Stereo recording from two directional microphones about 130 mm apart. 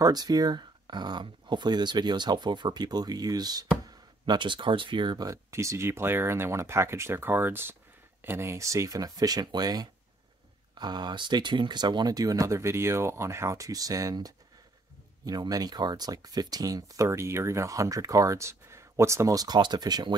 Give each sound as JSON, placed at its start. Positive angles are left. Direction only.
{"t": 0.0, "sound": "speech", "side_deg": -30}